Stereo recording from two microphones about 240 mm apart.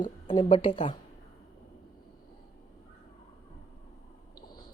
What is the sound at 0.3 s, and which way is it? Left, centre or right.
Speech, left.